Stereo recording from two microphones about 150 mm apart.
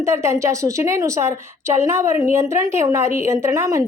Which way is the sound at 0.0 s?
20° right (ahead or behind).